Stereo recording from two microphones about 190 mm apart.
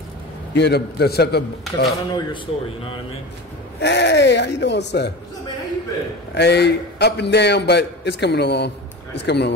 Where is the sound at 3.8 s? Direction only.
65° left (ahead or behind).